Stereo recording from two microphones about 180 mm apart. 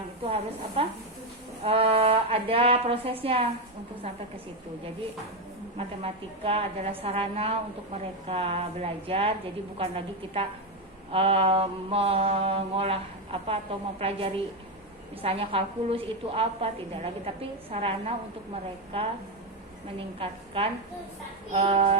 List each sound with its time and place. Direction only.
0.8 s mantra: 30° right (ahead or behind)
5.7 s mantra: 30° right (ahead or behind)
20.1 s a woman's voice: 30° right (ahead or behind)
21.5 s mantra: 35° right (ahead or behind)